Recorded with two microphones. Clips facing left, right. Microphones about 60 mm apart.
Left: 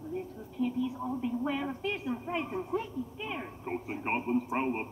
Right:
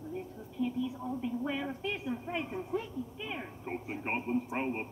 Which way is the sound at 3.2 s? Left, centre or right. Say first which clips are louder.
Left 2 dB; centre.